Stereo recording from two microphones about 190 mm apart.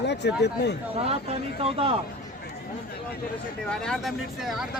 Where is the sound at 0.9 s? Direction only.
30° right (ahead or behind).